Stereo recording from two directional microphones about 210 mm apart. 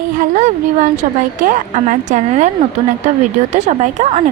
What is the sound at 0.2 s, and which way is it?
Speech, 35° right (ahead or behind).